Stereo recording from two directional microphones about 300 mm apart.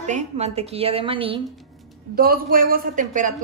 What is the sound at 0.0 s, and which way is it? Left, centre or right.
Speech, right.